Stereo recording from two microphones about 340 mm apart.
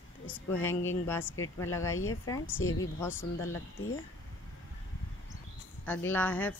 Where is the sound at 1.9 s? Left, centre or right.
Left.